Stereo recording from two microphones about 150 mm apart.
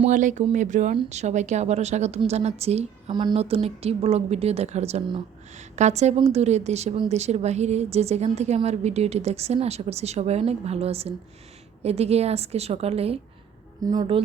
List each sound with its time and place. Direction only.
0.1 s a woman's voice: 55° right (ahead or behind)
3.1 s speech: 30° right (ahead or behind)
3.3 s a woman's voice: 40° right (ahead or behind)
13.8 s a woman's voice: 30° right (ahead or behind)